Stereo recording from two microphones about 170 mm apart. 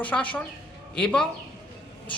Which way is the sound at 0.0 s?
10° left (ahead or behind).